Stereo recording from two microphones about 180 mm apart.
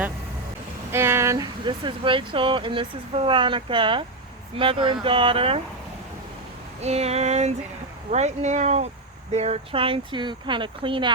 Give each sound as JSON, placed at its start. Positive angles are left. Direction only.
{"t": 0.9, "sound": "speech", "side_deg": -15}
{"t": 6.8, "sound": "speech", "side_deg": -35}